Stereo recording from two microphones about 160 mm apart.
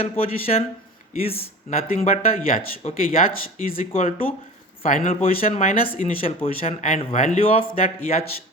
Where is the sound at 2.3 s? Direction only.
65° left (ahead or behind).